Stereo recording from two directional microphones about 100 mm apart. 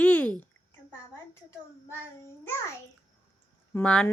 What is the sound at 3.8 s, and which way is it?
Speech, 5° left (ahead or behind).